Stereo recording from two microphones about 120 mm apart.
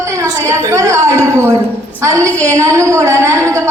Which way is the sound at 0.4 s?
25° right (ahead or behind).